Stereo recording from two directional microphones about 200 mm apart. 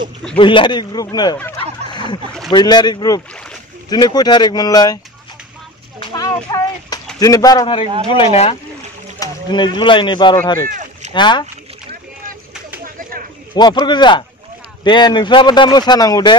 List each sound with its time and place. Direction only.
0.4 s speech: 25° left (ahead or behind)
5.9 s a sound: 20° left (ahead or behind)
7.2 s speech: 20° left (ahead or behind)
9.2 s a sound: 20° left (ahead or behind)
9.8 s speech: 25° left (ahead or behind)
10.7 s rowboat: 40° right (ahead or behind)
11.1 s speech: 20° left (ahead or behind)
12.8 s a sound: 45° right (ahead or behind)
13.6 s speech: 20° left (ahead or behind)